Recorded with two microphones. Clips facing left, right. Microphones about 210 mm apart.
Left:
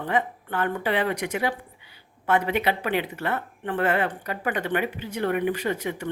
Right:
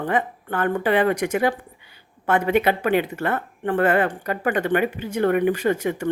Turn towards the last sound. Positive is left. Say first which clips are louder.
# right 6 dB
turn(degrees=-50)  # may be behind; listen again after turning